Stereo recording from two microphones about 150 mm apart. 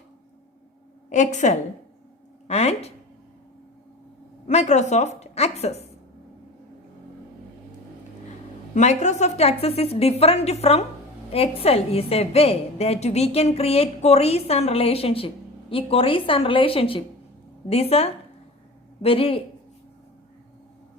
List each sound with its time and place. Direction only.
1.1 s a woman's voice: 55° left (ahead or behind)
4.4 s a woman's voice: 50° left (ahead or behind)
8.7 s a woman's voice: 50° left (ahead or behind)